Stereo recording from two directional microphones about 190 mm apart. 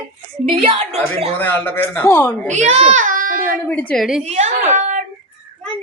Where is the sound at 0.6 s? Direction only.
30° right (ahead or behind).